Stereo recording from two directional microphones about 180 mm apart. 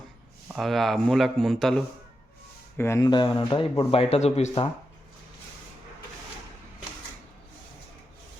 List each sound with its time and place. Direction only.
0.4 s speech: centre (ahead or behind)
2.7 s speech: 15° left (ahead or behind); by 4.7 s 35° left (ahead or behind)